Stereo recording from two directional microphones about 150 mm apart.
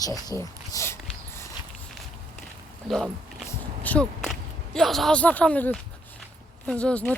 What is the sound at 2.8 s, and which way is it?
Speech, centre (ahead or behind).